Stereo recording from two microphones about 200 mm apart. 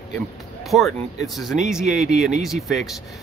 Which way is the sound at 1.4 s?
Centre (ahead or behind).